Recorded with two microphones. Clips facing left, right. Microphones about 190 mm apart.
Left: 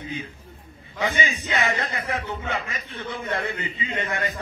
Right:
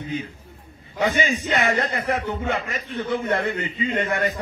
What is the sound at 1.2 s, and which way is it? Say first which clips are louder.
Speech: right 4 dB; 45° right (ahead or behind).